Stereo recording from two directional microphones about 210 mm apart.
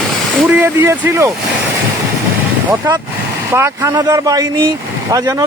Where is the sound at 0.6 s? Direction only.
10° right (ahead or behind).